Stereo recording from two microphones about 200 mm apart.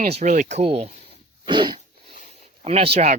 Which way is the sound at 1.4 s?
20° right (ahead or behind).